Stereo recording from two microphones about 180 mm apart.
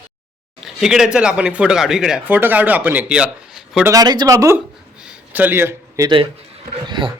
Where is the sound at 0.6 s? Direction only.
Centre (ahead or behind).